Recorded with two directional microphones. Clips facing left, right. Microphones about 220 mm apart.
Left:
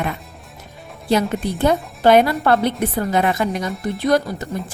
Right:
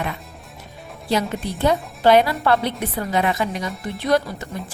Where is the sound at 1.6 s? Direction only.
50° left (ahead or behind).